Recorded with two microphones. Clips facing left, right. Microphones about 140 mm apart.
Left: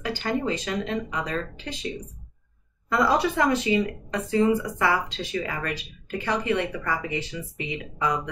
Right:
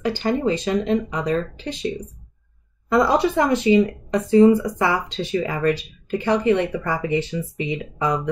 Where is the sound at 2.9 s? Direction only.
25° right (ahead or behind).